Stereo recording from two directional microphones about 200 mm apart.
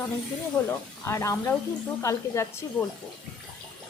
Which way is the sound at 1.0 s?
15° left (ahead or behind).